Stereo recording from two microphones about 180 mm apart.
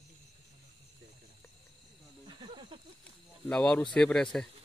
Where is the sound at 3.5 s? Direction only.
5° left (ahead or behind).